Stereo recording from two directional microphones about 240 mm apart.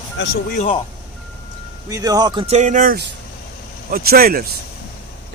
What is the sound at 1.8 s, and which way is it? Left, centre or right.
Speech, centre.